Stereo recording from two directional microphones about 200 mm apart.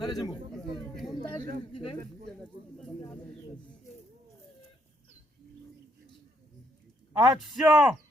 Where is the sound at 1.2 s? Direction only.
45° right (ahead or behind).